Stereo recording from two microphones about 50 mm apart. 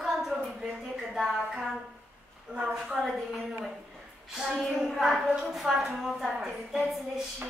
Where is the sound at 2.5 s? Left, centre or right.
Right.